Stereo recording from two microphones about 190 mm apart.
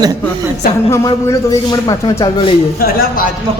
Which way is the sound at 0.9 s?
20° left (ahead or behind).